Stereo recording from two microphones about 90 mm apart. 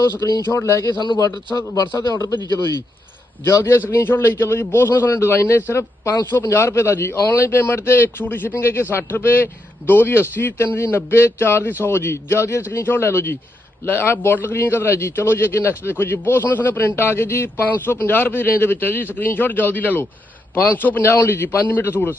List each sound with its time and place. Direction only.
0.2 s speech: 45° left (ahead or behind)
0.4 s a man's voice: 35° left (ahead or behind)
0.9 s a man's voice: 60° left (ahead or behind)
1.2 s a man's voice: 40° left (ahead or behind)
3.4 s a man's voice: 30° left (ahead or behind)